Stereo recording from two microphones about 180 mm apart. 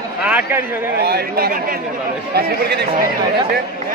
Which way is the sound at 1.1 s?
60° right (ahead or behind).